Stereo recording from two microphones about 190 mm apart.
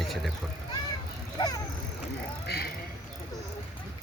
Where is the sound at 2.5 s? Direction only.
60° left (ahead or behind).